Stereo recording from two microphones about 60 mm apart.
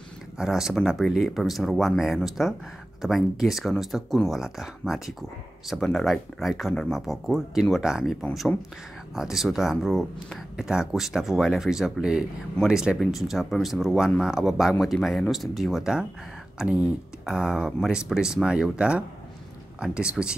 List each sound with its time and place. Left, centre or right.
0.4 s speech: centre
9.1 s speech: centre
10.5 s speech: centre
12.9 s speech: centre
16.6 s speech: right
17.4 s speech: centre